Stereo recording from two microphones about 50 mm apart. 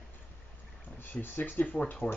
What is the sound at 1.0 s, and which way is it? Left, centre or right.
Speech, left.